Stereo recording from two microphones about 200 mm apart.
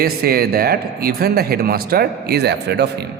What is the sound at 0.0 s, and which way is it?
A man's voice, 50° right (ahead or behind).